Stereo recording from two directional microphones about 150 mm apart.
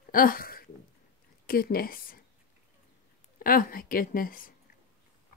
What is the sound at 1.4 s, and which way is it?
Speech, 75° left (ahead or behind).